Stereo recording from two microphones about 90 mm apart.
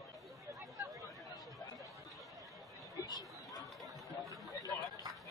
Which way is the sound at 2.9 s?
45° left (ahead or behind).